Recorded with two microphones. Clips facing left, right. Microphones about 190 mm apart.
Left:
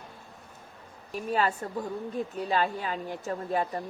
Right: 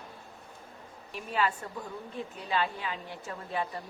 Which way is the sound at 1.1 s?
40° left (ahead or behind).